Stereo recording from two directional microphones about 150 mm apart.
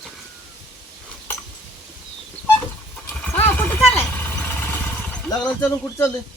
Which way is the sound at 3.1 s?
15° left (ahead or behind).